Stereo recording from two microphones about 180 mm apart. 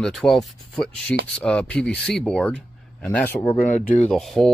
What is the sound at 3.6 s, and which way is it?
Speech, 45° left (ahead or behind).